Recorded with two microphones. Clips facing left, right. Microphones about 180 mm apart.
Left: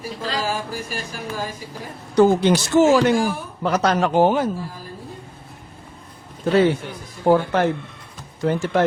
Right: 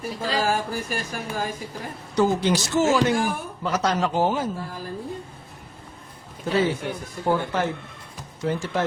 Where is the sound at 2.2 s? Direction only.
60° left (ahead or behind).